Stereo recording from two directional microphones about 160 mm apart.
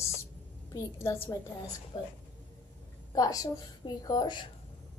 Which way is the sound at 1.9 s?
30° left (ahead or behind).